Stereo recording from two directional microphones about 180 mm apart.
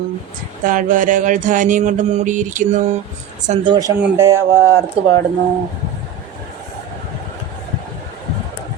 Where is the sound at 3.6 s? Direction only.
25° right (ahead or behind).